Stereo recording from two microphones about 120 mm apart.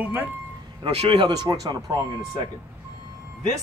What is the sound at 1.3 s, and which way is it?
Speech, 35° right (ahead or behind).